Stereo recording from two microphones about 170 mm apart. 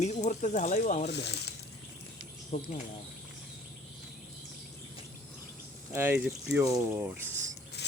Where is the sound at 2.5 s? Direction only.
50° left (ahead or behind).